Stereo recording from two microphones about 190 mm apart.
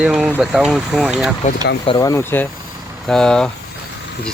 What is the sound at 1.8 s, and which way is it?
Speech, 20° left (ahead or behind).